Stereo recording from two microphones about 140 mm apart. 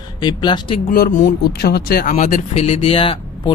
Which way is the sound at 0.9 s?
75° left (ahead or behind).